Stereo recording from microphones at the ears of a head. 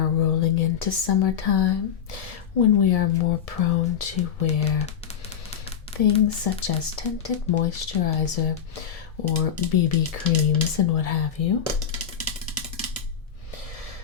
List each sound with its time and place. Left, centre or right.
0.0 s speech: left
6.0 s speech: left
11.9 s music: right